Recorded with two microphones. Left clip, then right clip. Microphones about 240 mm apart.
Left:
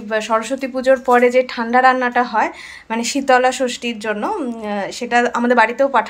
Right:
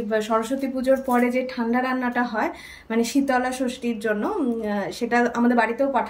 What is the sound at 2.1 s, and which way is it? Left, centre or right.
Speech, centre.